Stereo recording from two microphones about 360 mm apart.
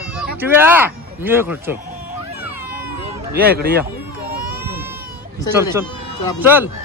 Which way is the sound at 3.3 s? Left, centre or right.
Right.